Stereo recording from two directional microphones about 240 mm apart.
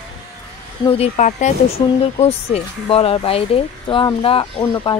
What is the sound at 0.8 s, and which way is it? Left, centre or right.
Speech, left.